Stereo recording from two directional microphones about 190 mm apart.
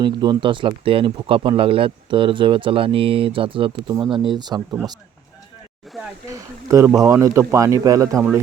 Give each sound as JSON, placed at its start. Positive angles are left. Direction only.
{"t": 0.0, "sound": "speech", "side_deg": -25}
{"t": 6.7, "sound": "speech", "side_deg": -15}